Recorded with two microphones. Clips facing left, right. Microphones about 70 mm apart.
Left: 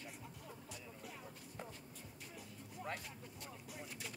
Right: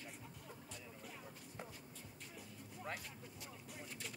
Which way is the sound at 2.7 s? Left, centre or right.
Centre.